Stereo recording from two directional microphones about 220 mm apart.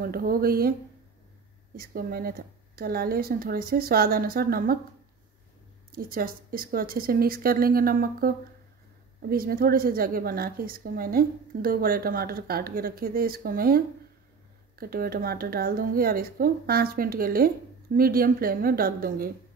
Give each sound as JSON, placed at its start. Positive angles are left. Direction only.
{"t": 0.0, "sound": "speech", "side_deg": -40}
{"t": 1.8, "sound": "a woman's voice", "side_deg": -40}
{"t": 5.9, "sound": "a woman's voice", "side_deg": -40}